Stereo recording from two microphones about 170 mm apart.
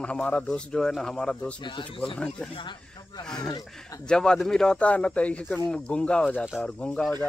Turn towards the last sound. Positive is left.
turn(degrees=5)  # may be behind; listen again after turning